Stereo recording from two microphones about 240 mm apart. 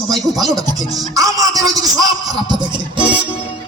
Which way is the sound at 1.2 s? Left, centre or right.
Centre.